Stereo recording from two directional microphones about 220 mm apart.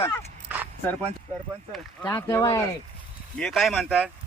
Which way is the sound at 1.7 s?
10° left (ahead or behind).